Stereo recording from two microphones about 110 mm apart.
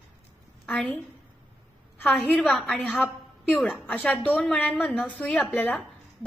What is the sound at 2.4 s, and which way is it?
Speech, centre (ahead or behind).